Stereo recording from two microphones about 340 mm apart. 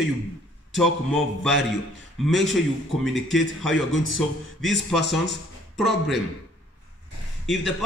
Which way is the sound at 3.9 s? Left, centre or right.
Left.